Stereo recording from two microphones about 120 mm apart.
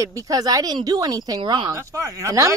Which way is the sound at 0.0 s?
30° right (ahead or behind).